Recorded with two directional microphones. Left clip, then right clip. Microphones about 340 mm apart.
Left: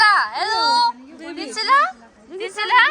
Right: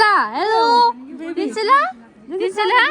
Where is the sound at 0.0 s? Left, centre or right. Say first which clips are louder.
Right 1 dB; centre.